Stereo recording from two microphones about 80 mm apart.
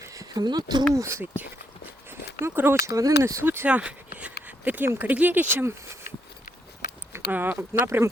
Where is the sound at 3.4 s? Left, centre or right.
Right.